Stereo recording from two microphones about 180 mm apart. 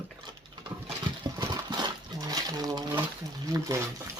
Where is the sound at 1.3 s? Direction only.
20° right (ahead or behind).